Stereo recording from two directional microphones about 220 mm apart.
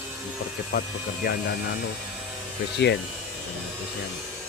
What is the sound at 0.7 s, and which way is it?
Speech, 50° left (ahead or behind).